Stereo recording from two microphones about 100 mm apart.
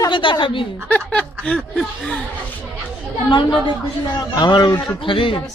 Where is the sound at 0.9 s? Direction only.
10° left (ahead or behind).